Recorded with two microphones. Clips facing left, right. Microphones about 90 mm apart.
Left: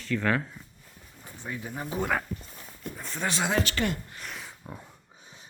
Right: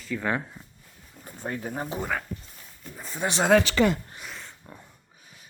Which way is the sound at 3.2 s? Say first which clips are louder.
Right 3 dB; 20° right (ahead or behind).